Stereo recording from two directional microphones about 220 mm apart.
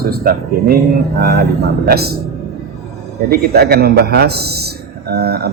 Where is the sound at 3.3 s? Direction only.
45° right (ahead or behind).